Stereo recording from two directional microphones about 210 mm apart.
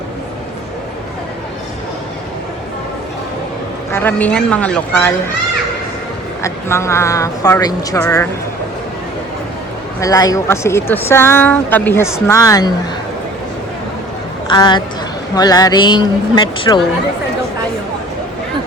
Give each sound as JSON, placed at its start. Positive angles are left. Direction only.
{"t": 3.9, "sound": "speech", "side_deg": 10}
{"t": 6.4, "sound": "speech", "side_deg": 15}
{"t": 10.0, "sound": "speech", "side_deg": 15}
{"t": 14.4, "sound": "a woman's voice", "side_deg": 20}